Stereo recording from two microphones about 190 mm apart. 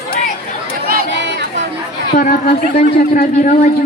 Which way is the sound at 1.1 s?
70° right (ahead or behind).